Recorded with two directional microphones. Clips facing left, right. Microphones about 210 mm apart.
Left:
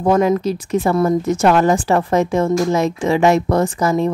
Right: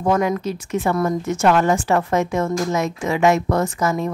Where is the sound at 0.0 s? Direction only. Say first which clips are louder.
Left 5 dB; 30° left (ahead or behind).